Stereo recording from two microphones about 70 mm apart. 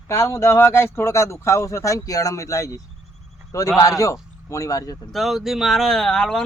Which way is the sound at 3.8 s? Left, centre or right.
Left.